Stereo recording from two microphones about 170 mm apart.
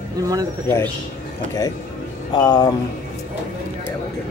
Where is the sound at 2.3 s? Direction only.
25° left (ahead or behind).